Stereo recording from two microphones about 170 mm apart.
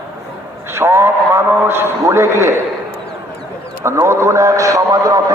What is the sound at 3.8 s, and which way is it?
A man's voice, 15° right (ahead or behind).